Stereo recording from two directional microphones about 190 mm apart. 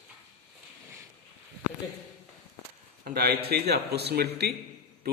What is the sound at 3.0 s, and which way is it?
A man's voice, 55° right (ahead or behind).